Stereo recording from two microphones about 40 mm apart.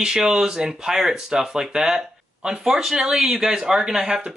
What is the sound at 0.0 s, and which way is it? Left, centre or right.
Speech, centre.